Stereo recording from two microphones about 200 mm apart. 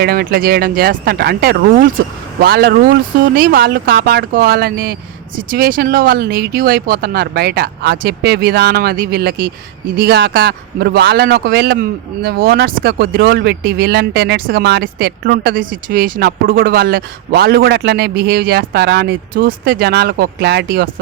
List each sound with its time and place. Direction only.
0.0 s speech: 50° right (ahead or behind)